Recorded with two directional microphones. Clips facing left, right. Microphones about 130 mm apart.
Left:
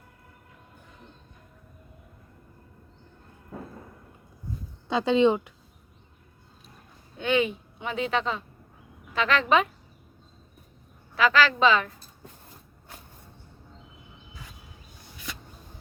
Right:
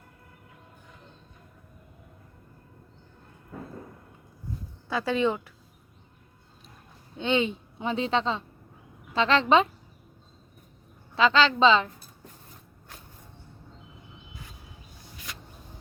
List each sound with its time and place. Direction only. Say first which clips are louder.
4.9 s speech: left 5 dB; 20° left (ahead or behind)
7.2 s a woman's voice: left 1 dB; 25° right (ahead or behind)
11.1 s a woman's voice: right 1 dB; 25° right (ahead or behind)